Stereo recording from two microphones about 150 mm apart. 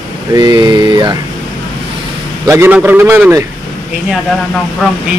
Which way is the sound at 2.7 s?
10° right (ahead or behind).